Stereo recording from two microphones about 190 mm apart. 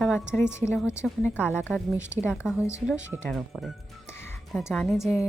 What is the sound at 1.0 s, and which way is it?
Speech, 5° right (ahead or behind).